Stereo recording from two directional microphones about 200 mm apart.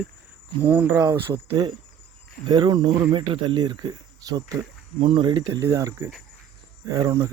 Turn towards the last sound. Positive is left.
turn(degrees=-15)  # may be behind; listen again after turning